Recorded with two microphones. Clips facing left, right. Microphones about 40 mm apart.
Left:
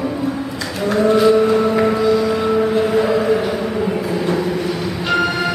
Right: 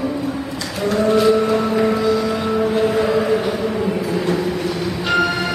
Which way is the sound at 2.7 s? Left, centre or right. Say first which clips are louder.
Left 1 dB; centre.